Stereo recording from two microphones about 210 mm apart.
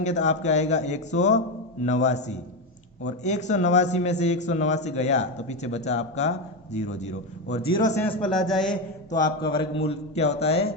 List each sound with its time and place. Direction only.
0.0 s a man's voice: 35° left (ahead or behind)
7.9 s a man's voice: 10° left (ahead or behind)
8.2 s a man's voice: centre (ahead or behind)
9.2 s speech: 25° left (ahead or behind)